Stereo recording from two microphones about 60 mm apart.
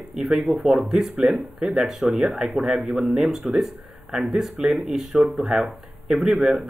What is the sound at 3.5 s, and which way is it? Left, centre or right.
Speech, centre.